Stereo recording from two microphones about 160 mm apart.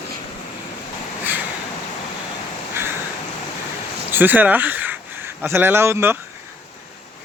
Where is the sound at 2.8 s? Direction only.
15° right (ahead or behind).